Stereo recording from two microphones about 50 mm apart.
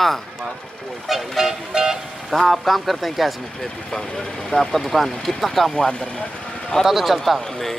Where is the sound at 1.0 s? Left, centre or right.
Centre.